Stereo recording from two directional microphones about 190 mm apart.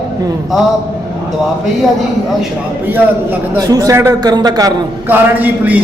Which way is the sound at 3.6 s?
20° right (ahead or behind).